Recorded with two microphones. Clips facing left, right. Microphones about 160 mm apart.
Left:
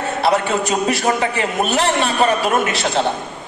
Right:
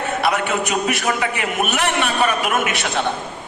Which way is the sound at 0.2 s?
30° left (ahead or behind).